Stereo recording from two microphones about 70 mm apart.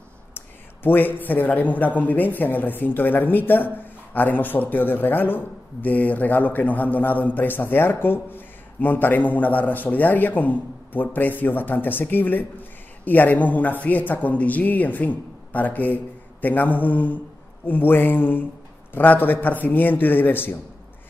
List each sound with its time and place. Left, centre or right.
0.8 s a man's voice: left